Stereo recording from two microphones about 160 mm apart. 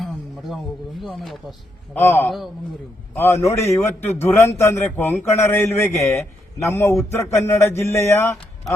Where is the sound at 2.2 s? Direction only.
Centre (ahead or behind).